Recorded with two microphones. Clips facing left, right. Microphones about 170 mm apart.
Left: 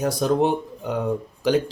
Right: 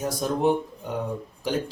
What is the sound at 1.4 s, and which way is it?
Speech, 90° left.